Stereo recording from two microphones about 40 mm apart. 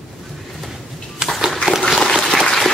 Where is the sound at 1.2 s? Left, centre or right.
Centre.